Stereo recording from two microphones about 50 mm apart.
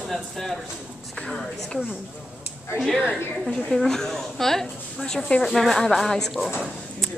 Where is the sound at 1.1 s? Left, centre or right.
Centre.